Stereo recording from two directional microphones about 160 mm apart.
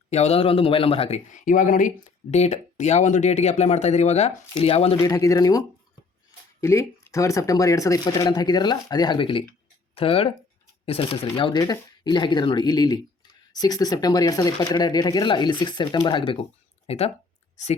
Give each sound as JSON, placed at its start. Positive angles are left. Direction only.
{"t": 0.1, "sound": "a man's voice", "side_deg": 40}
{"t": 2.3, "sound": "speech", "side_deg": 45}
{"t": 5.0, "sound": "a man's voice", "side_deg": 20}